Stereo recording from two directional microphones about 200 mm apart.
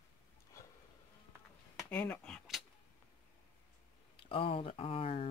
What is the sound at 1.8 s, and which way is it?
Speech, 10° left (ahead or behind).